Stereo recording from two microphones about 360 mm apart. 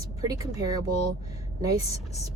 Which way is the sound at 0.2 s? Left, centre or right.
Centre.